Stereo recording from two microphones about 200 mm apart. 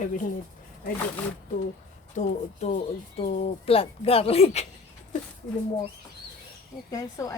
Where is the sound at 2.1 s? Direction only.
35° left (ahead or behind).